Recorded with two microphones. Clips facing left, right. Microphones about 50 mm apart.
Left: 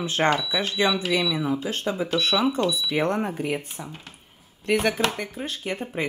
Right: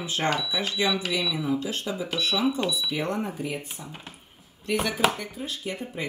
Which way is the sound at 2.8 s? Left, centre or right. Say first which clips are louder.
Left 4 dB; left.